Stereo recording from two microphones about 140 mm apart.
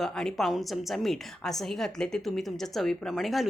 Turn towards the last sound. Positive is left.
turn(degrees=0)  # may be behind; listen again after turning